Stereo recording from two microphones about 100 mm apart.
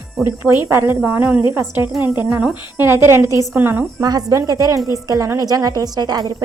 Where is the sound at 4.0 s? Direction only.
40° right (ahead or behind).